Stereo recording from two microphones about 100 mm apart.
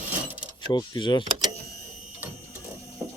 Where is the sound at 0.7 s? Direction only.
50° left (ahead or behind).